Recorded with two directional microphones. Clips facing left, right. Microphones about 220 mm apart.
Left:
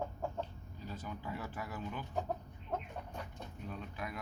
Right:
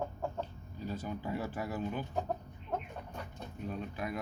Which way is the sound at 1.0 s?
35° right (ahead or behind).